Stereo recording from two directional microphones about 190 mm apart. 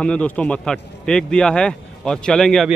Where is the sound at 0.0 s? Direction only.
5° left (ahead or behind).